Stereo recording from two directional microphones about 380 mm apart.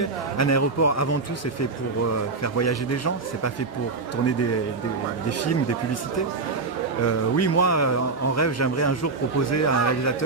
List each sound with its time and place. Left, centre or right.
0.0 s speech: left
2.4 s speech: left